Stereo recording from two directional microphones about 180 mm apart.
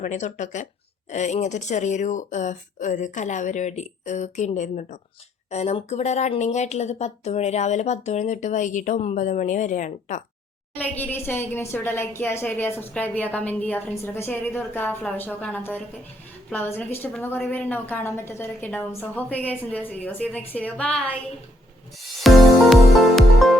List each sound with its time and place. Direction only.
0.0 s speech: 40° left (ahead or behind)
10.8 s a woman's voice: 10° left (ahead or behind)
22.2 s music: centre (ahead or behind)